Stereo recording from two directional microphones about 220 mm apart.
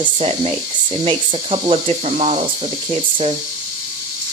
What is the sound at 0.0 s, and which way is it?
Speech, 25° right (ahead or behind).